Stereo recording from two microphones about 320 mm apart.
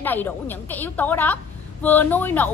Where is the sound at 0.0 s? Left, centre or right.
Centre.